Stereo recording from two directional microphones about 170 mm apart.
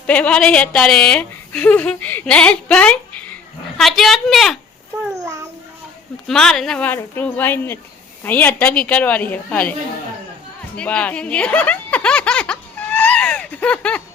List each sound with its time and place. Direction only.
0.1 s a woman's voice: 5° left (ahead or behind)
5.2 s a sound: 15° right (ahead or behind)
6.2 s speech: 5° left (ahead or behind)
10.8 s speech: 5° left (ahead or behind)